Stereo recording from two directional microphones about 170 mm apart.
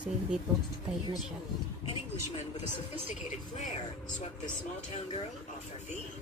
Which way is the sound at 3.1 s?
45° left (ahead or behind).